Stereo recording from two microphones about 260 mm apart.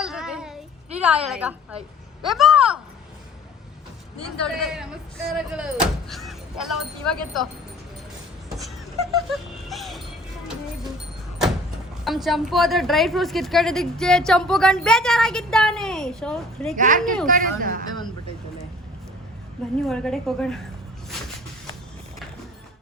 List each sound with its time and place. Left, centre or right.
0.0 s child singing: centre
0.9 s a woman's voice: centre
4.4 s a woman's voice: centre
8.4 s a sound: centre
9.1 s music: centre
12.0 s a woman's voice: centre
16.7 s speech: right
19.8 s a woman's voice: centre